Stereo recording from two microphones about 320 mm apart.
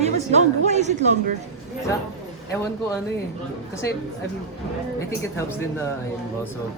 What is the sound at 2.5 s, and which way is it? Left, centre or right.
Speech, centre.